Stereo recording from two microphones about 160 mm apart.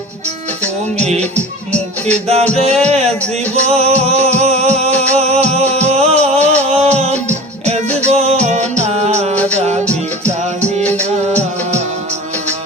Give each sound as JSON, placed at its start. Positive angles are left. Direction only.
{"t": 2.1, "sound": "music", "side_deg": -40}
{"t": 9.3, "sound": "music", "side_deg": 10}
{"t": 9.6, "sound": "music", "side_deg": -45}
{"t": 9.8, "sound": "music", "side_deg": 10}